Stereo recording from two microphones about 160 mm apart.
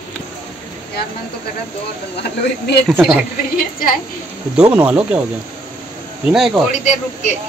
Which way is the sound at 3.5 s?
60° left (ahead or behind).